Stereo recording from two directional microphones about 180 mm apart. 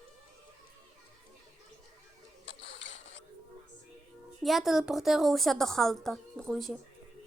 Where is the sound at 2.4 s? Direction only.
70° left (ahead or behind); by 3.2 s 90° left.